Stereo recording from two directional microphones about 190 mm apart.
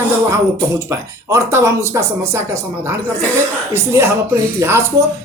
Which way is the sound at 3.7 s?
15° right (ahead or behind).